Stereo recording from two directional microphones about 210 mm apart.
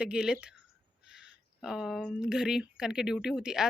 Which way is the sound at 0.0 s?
5° right (ahead or behind).